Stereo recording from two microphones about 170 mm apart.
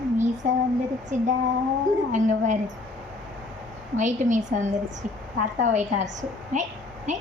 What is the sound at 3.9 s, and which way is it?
A woman's voice, 45° right (ahead or behind).